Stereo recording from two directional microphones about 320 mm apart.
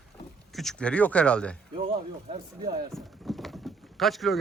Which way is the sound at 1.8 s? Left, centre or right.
Right.